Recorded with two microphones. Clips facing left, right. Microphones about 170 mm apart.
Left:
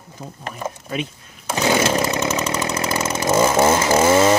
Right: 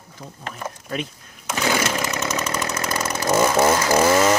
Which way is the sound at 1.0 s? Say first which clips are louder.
Left 3 dB; 30° left (ahead or behind).